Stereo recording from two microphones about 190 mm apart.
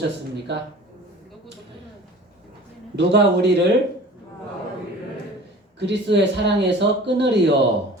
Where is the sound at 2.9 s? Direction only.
65° right (ahead or behind).